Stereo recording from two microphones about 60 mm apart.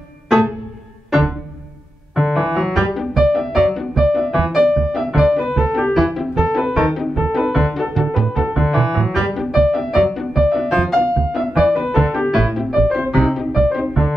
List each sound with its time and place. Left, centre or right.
2.1 s music: centre